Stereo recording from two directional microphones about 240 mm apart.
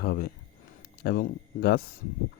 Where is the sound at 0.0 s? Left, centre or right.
Left.